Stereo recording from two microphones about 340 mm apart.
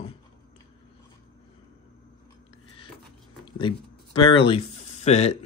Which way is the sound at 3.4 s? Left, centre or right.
Centre.